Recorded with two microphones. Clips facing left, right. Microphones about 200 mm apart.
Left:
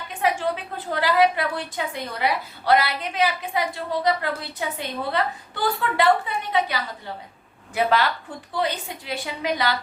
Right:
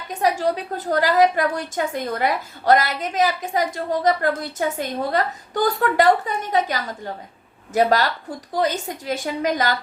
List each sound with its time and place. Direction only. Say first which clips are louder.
0.1 s a woman's voice: right 3 dB; 40° right (ahead or behind)